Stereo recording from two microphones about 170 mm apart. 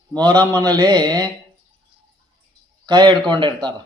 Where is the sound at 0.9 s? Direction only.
25° right (ahead or behind).